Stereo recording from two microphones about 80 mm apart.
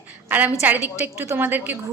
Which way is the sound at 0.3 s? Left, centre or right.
Right.